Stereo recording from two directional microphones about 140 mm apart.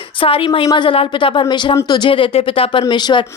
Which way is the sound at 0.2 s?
40° left (ahead or behind).